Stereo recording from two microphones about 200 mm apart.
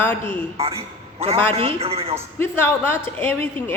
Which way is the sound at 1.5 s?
30° right (ahead or behind).